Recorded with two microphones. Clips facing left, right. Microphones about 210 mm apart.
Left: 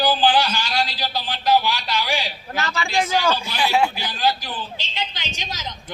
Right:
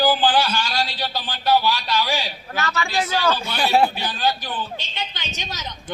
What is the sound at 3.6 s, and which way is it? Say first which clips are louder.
Speech: right 2 dB; 35° right (ahead or behind).